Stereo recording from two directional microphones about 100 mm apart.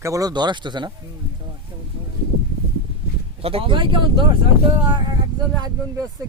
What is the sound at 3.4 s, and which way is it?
Speech, 70° right (ahead or behind).